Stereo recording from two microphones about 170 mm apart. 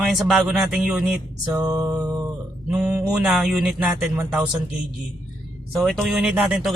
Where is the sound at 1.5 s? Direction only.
20° right (ahead or behind).